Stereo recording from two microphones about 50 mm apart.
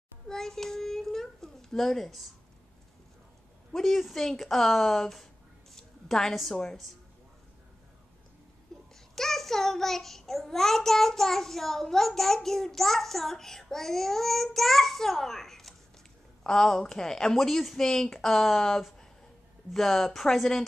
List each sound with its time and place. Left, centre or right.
0.3 s a sound: centre
3.7 s a child's voice: centre
8.7 s babbling: centre
9.1 s a child's voice: centre